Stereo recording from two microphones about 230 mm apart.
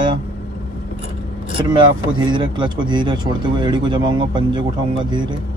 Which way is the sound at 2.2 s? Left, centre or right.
Centre.